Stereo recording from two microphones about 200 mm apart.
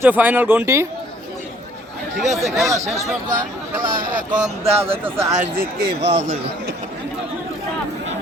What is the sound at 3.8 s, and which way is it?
Speech, 45° right (ahead or behind).